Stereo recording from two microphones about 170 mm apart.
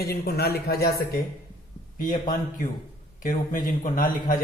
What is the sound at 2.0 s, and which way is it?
A man's voice, 50° left (ahead or behind).